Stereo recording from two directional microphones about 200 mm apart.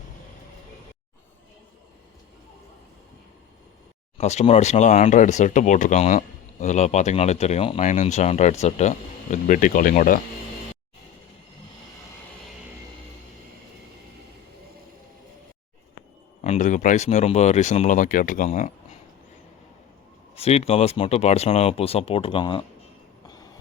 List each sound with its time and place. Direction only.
4.2 s speech: 35° left (ahead or behind)
16.4 s speech: 35° left (ahead or behind)
20.3 s speech: 30° left (ahead or behind)
23.2 s train: 20° left (ahead or behind)